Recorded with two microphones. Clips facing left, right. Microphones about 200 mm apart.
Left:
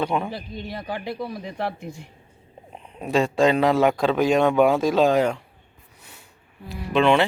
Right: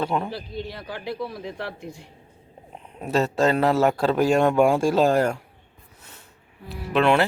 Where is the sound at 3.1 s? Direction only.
5° right (ahead or behind).